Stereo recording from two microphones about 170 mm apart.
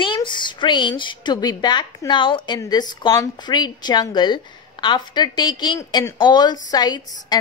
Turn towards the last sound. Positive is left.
turn(degrees=25)  # may be behind; listen again after turning